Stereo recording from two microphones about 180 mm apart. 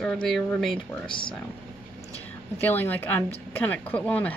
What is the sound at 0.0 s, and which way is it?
Speech, 5° left (ahead or behind).